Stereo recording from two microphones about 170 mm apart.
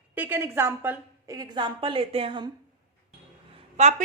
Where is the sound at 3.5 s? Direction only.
40° right (ahead or behind).